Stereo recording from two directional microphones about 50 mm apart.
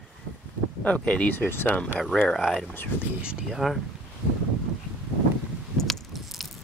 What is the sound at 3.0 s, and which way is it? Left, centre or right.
Speech, right.